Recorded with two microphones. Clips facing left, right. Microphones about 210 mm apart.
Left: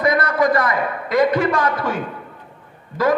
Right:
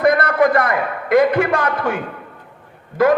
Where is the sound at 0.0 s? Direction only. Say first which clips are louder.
Right 3 dB; 60° right (ahead or behind).